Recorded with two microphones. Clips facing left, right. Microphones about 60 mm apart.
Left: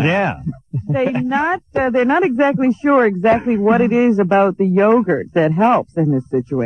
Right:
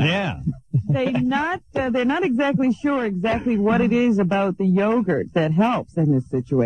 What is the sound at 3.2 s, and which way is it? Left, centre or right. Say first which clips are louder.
A man's voice: left 6 dB; left.